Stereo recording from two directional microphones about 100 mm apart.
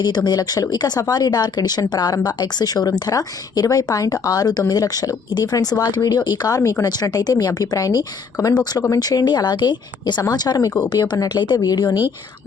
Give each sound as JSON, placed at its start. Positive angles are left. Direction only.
{"t": 0.0, "sound": "speech", "side_deg": 45}
{"t": 6.6, "sound": "speech", "side_deg": 30}
{"t": 6.8, "sound": "speech", "side_deg": 40}